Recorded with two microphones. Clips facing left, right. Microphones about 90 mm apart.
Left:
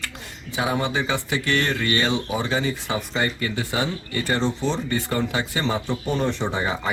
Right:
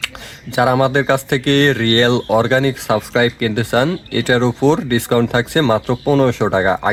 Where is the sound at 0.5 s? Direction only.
75° right (ahead or behind).